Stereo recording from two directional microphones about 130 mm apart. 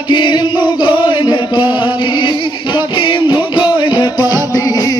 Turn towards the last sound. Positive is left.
turn(degrees=30)  # may be behind; listen again after turning